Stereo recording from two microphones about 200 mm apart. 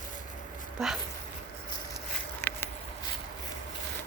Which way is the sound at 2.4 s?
10° left (ahead or behind).